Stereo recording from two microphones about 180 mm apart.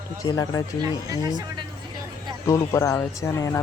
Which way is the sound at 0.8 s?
20° right (ahead or behind).